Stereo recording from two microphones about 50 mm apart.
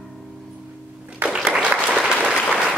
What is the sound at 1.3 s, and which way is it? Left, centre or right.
Applause, centre.